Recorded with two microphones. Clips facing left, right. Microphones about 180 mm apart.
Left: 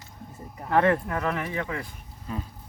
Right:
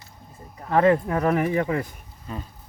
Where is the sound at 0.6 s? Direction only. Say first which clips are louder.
Right 3 dB; 10° right (ahead or behind).